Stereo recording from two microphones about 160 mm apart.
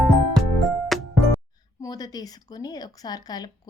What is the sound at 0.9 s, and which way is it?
Music, centre (ahead or behind).